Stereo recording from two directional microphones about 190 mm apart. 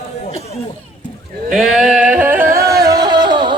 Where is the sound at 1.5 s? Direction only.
Centre (ahead or behind).